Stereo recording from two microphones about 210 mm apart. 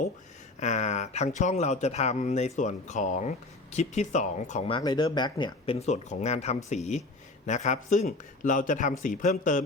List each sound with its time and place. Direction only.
0.6 s speech: 35° left (ahead or behind)